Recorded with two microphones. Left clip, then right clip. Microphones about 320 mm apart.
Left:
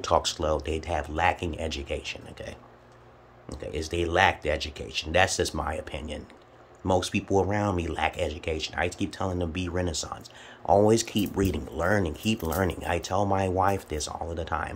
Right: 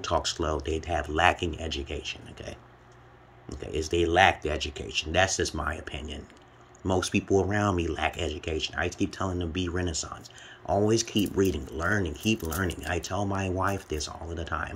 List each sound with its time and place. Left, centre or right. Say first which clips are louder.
0.0 s speech: left 3 dB; centre
3.7 s speech: right 2 dB; centre